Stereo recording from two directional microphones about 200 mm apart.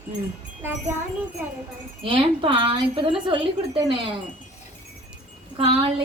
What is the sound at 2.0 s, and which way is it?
A woman's voice, 25° right (ahead or behind).